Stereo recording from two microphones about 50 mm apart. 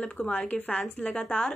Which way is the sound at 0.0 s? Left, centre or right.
Left.